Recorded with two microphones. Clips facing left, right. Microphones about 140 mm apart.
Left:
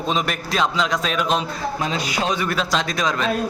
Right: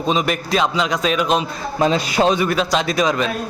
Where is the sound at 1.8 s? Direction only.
30° right (ahead or behind).